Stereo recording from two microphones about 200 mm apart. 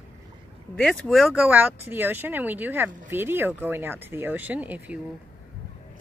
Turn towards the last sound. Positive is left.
turn(degrees=-10)  # may be behind; listen again after turning